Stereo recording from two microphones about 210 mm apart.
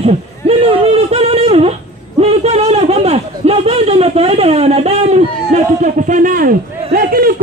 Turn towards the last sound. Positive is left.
turn(degrees=-45)  # may be behind; listen again after turning